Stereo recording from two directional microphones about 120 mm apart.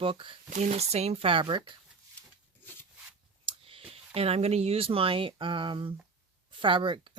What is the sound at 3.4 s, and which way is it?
Speech, 50° right (ahead or behind).